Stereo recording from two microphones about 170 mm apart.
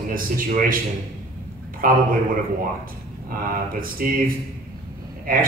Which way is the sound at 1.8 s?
55° right (ahead or behind).